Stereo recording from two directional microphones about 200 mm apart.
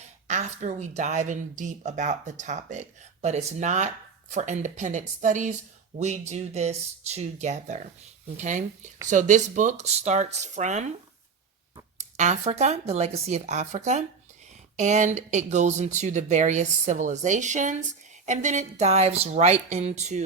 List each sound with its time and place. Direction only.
0.3 s speech: 35° right (ahead or behind)
11.9 s speech: 35° right (ahead or behind)